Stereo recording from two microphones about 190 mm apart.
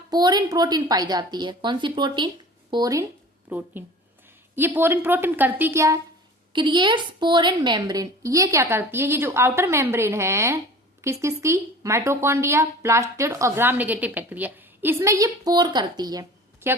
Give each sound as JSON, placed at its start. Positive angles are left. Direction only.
{"t": 0.1, "sound": "a woman's voice", "side_deg": -20}
{"t": 3.5, "sound": "speech", "side_deg": -10}